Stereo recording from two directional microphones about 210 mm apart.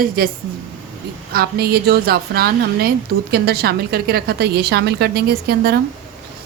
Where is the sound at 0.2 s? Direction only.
45° right (ahead or behind).